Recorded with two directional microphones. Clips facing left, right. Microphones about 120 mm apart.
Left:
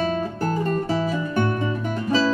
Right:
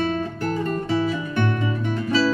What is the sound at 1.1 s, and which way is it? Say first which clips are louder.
Music: left 1 dB; 35° left (ahead or behind).